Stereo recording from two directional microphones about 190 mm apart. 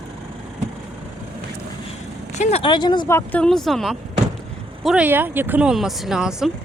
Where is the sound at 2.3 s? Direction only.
35° left (ahead or behind).